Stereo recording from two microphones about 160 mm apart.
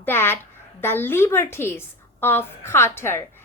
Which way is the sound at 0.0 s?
15° left (ahead or behind).